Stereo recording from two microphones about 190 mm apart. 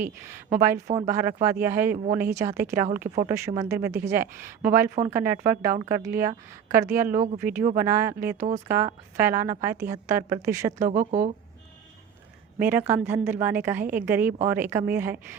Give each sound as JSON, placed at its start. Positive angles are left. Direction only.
{"t": 0.0, "sound": "a woman's voice", "side_deg": -10}
{"t": 2.9, "sound": "speech", "side_deg": -45}
{"t": 3.2, "sound": "a woman's voice", "side_deg": -15}
{"t": 10.8, "sound": "speech", "side_deg": -45}
{"t": 12.5, "sound": "a woman's voice", "side_deg": -10}